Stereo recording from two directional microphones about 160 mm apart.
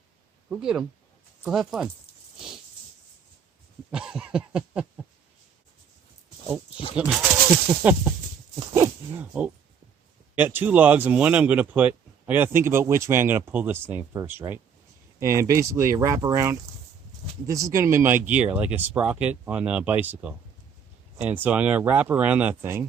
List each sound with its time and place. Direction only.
0.5 s speech: 5° right (ahead or behind)
3.9 s cough: 5° right (ahead or behind)
6.9 s speech: 5° right (ahead or behind)
8.7 s a sound: 15° right (ahead or behind)
10.3 s speech: 10° right (ahead or behind)